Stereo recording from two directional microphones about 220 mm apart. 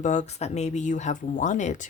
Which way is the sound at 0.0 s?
35° left (ahead or behind).